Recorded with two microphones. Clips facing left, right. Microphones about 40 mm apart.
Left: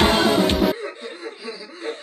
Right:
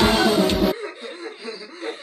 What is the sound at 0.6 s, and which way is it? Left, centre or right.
Music, centre.